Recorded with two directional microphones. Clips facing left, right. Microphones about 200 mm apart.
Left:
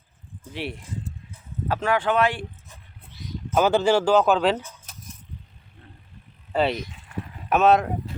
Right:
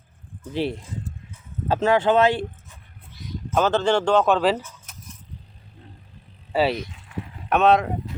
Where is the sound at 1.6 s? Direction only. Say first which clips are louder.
Right 4 dB; 25° right (ahead or behind).